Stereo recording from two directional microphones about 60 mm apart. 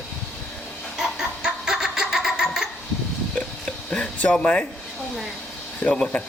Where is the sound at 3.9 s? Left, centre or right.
Centre.